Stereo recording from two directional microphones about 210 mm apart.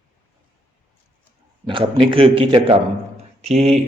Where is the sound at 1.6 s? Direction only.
25° right (ahead or behind).